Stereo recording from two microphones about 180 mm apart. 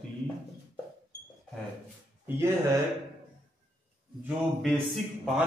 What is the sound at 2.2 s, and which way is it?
Speech, 15° right (ahead or behind).